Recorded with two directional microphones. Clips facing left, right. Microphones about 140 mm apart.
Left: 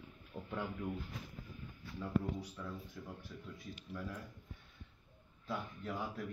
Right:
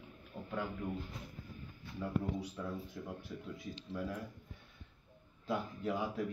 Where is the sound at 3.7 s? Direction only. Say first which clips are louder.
Right 4 dB; 25° right (ahead or behind).